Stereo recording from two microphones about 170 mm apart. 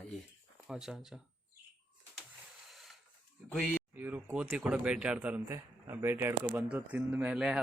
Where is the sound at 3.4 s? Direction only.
Centre (ahead or behind).